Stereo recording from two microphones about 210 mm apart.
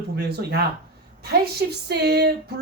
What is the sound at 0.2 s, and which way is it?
Speech, 50° right (ahead or behind).